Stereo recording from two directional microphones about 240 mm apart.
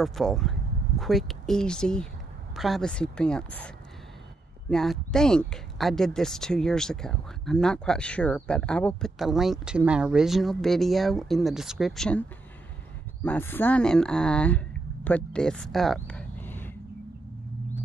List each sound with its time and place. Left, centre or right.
0.0 s speech: centre